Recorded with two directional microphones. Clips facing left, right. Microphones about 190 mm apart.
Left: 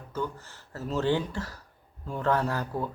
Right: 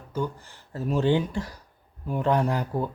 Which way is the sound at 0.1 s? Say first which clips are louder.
Right 3 dB; 15° right (ahead or behind).